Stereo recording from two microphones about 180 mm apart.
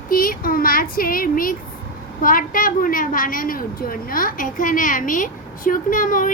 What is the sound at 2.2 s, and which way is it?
A woman's voice, 50° left (ahead or behind).